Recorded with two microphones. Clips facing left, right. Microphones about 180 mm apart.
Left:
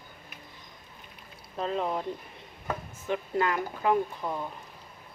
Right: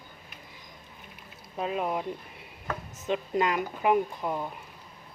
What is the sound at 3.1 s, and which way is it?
Speech, 20° right (ahead or behind).